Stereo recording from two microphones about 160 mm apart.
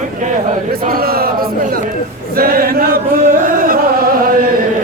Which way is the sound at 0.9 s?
70° right (ahead or behind).